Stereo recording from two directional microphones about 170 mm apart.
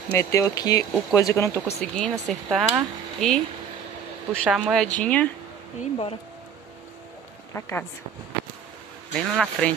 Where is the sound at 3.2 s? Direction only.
5° left (ahead or behind).